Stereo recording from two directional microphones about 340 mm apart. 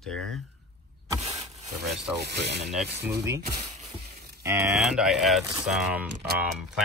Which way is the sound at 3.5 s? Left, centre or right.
Centre.